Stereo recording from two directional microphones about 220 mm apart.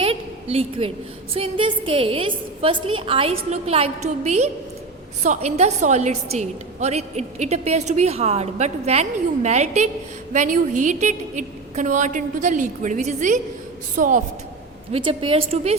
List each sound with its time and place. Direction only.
0.0 s a woman's voice: 25° right (ahead or behind)
14.9 s a woman's voice: 25° right (ahead or behind)